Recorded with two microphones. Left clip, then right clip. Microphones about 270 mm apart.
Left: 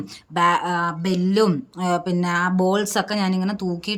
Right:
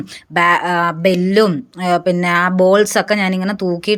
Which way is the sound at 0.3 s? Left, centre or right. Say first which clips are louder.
Right 6 dB; centre.